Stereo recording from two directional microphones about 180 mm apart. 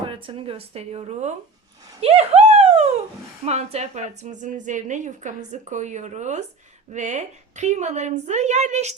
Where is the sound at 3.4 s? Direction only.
35° right (ahead or behind).